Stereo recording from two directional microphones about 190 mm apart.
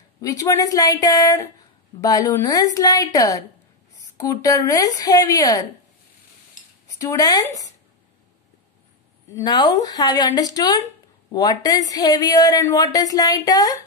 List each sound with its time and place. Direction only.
0.2 s a woman's voice: 20° left (ahead or behind)
7.0 s speech: 20° left (ahead or behind)
9.3 s speech: 20° left (ahead or behind)